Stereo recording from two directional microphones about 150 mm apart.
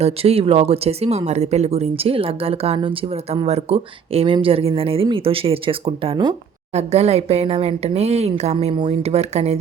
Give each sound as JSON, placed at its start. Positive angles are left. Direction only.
{"t": 0.0, "sound": "speech", "side_deg": -40}
{"t": 6.7, "sound": "speech", "side_deg": -45}
{"t": 8.5, "sound": "speech", "side_deg": -35}